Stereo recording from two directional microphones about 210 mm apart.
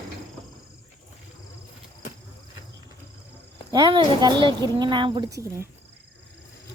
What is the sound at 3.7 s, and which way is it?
A woman's voice, 20° right (ahead or behind).